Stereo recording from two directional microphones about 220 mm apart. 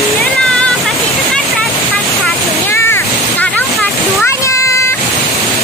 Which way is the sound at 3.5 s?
5° left (ahead or behind).